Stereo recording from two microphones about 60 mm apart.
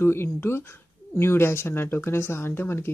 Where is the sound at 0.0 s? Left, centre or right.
Left.